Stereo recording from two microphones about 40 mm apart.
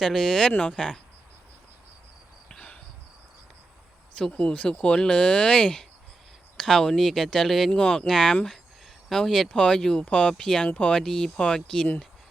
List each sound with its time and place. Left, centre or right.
0.0 s speech: centre
4.3 s speech: left
6.6 s speech: centre
7.7 s speech: centre
10.7 s speech: left
10.9 s speech: centre